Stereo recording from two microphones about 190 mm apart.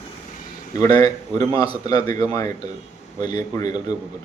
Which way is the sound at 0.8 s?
20° left (ahead or behind).